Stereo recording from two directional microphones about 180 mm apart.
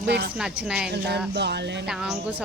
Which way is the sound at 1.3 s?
70° right (ahead or behind).